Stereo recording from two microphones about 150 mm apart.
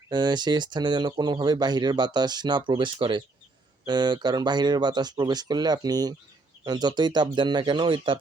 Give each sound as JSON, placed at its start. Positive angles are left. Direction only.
{"t": 0.1, "sound": "speech", "side_deg": -30}